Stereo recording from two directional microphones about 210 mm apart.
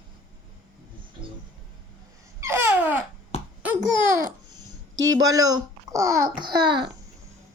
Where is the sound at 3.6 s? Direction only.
10° right (ahead or behind).